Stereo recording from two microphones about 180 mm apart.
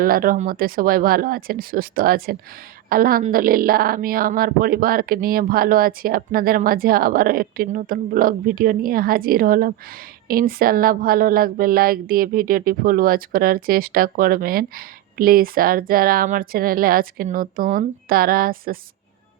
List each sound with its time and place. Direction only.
0.0 s speech: 55° right (ahead or behind)